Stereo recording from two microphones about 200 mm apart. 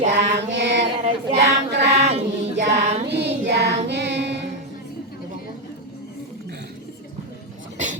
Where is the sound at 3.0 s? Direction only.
55° right (ahead or behind).